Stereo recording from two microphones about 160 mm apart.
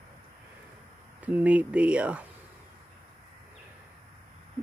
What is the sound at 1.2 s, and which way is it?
Speech, 10° right (ahead or behind).